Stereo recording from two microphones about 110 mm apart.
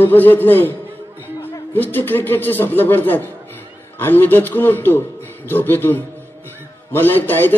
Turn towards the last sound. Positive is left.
turn(degrees=20)  # may be behind; listen again after turning